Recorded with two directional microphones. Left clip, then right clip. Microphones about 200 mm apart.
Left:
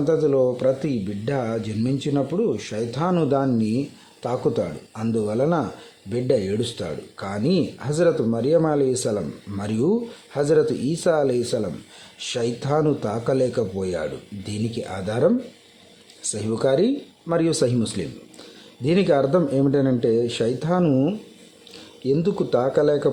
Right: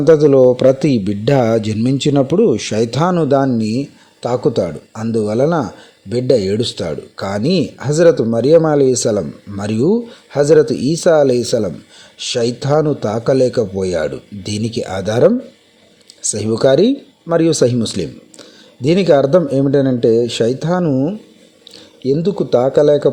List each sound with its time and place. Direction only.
0.0 s speech: 30° right (ahead or behind)
16.3 s speech: 25° right (ahead or behind)
20.8 s speech: 10° right (ahead or behind)